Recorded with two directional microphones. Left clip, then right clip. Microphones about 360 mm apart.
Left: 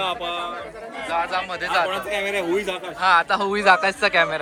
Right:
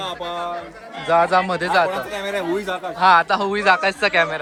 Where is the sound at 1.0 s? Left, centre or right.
Centre.